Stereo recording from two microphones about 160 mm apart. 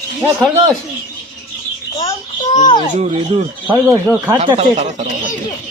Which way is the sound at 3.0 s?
45° right (ahead or behind).